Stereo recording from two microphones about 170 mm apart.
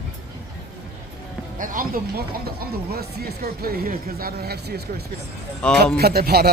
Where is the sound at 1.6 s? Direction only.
55° right (ahead or behind); by 5.0 s 70° right (ahead or behind).